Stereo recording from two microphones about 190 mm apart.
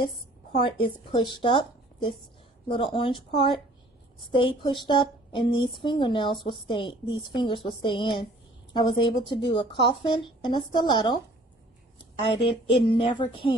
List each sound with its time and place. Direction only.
0.6 s a woman's voice: 25° left (ahead or behind)
4.4 s a woman's voice: 25° left (ahead or behind)
12.2 s a woman's voice: 30° left (ahead or behind)